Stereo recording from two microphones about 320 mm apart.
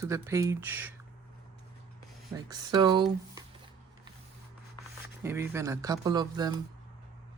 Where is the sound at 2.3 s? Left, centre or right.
Centre.